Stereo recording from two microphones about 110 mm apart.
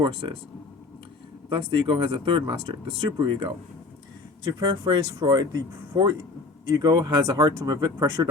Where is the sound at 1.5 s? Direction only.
50° right (ahead or behind).